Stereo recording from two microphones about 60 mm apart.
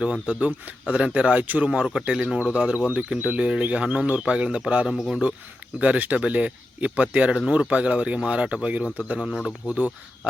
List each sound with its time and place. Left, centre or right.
0.3 s speech: right
4.9 s speech: centre
5.8 s speech: right
9.2 s speech: centre
9.6 s speech: right